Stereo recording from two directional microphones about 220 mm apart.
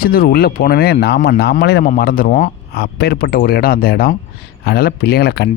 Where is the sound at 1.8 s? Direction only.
40° left (ahead or behind).